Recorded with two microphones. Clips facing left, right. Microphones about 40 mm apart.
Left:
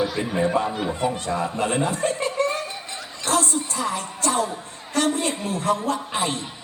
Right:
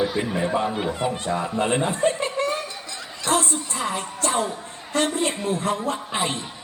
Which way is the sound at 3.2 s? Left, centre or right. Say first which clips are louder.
Even; right.